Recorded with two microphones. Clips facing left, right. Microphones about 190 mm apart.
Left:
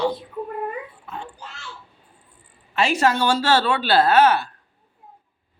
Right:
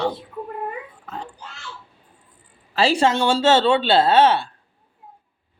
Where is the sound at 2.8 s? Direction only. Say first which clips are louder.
Right 2 dB; 30° right (ahead or behind).